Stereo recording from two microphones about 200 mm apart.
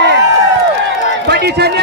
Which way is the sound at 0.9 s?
55° right (ahead or behind).